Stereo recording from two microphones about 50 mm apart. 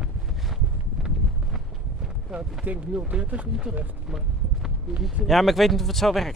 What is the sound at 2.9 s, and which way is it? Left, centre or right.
Speech, right.